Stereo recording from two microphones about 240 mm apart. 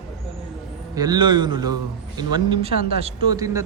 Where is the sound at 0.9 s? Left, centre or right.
Centre.